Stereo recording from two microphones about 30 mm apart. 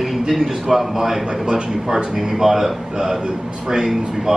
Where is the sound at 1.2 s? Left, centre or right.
Right.